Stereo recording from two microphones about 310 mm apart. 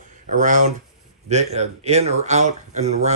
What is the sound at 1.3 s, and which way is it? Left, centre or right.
Speech, right.